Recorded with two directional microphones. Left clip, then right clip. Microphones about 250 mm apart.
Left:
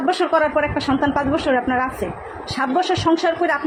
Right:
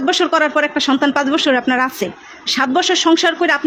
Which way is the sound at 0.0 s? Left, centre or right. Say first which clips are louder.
Right 3 dB; right.